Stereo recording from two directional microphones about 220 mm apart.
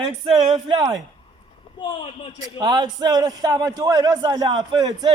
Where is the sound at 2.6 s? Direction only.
20° right (ahead or behind).